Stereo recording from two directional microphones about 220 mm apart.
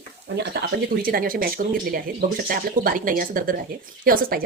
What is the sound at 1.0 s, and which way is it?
Speech, 40° right (ahead or behind).